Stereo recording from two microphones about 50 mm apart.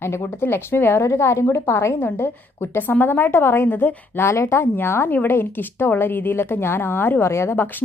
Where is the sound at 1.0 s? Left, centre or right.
Left.